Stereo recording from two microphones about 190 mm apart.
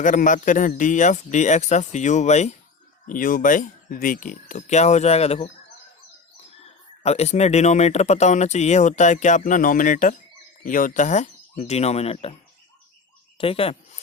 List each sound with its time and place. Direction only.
0.0 s speech: 45° left (ahead or behind)
6.6 s speech: 35° left (ahead or behind)
13.4 s speech: 30° left (ahead or behind)